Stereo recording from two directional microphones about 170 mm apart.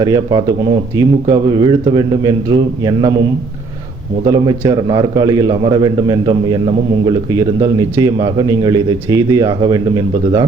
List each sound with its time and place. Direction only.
0.0 s a man's voice: 25° right (ahead or behind)
4.3 s a man's voice: 20° right (ahead or behind)